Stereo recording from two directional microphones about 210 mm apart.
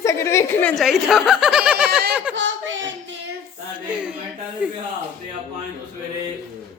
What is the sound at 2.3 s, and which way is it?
Speech, 60° right (ahead or behind).